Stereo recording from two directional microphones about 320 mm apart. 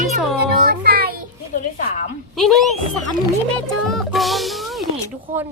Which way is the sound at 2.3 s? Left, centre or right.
Centre.